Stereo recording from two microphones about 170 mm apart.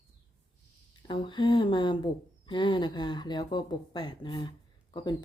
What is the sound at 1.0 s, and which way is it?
Speech, 30° left (ahead or behind).